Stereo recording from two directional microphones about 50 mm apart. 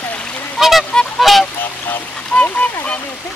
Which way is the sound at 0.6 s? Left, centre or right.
Centre.